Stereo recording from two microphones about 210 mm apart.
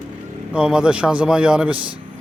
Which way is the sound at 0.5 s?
5° right (ahead or behind).